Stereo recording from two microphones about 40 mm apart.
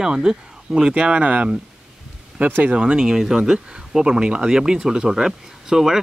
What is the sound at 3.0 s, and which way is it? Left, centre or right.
Speech, centre.